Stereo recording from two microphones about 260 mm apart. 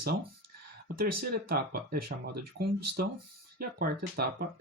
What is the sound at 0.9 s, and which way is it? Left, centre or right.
Speech, right.